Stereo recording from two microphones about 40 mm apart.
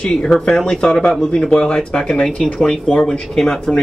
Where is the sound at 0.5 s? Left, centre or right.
Left.